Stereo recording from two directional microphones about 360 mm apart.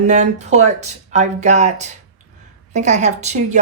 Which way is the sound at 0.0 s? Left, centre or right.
Centre.